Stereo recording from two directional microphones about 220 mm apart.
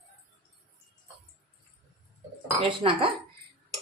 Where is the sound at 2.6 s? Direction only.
25° right (ahead or behind).